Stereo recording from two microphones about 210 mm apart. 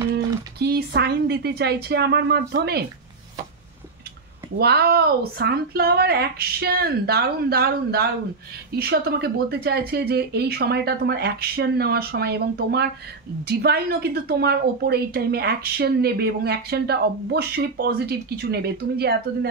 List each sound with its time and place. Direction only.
0.1 s a woman's voice: 50° right (ahead or behind)
4.6 s a woman's voice: 50° right (ahead or behind)